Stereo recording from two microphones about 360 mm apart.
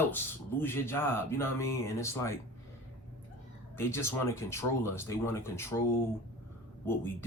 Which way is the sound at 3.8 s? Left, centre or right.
Centre.